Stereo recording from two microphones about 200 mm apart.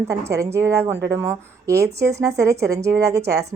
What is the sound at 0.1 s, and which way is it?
Speech, 15° right (ahead or behind).